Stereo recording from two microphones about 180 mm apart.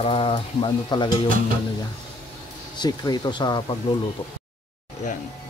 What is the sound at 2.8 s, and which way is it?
Speech, 25° left (ahead or behind).